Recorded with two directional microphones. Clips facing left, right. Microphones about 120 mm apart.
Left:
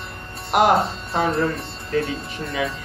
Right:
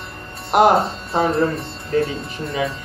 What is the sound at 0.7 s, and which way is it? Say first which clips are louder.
Speech: right 2 dB; centre (ahead or behind).